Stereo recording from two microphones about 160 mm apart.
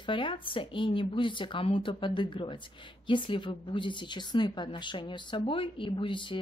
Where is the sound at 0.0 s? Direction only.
30° left (ahead or behind).